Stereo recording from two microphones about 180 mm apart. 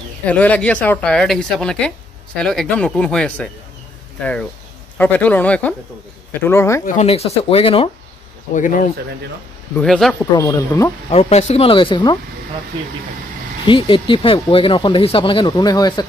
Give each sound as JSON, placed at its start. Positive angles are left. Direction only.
{"t": 0.2, "sound": "speech", "side_deg": 10}
{"t": 6.9, "sound": "speech", "side_deg": 35}
{"t": 8.5, "sound": "speech", "side_deg": 45}
{"t": 9.8, "sound": "speech", "side_deg": 0}
{"t": 10.3, "sound": "speech", "side_deg": 20}
{"t": 11.1, "sound": "speech", "side_deg": 35}
{"t": 13.7, "sound": "speech", "side_deg": 30}